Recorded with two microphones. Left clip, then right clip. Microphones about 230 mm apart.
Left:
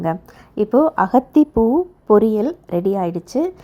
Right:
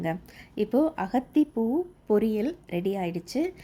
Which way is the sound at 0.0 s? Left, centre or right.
Centre.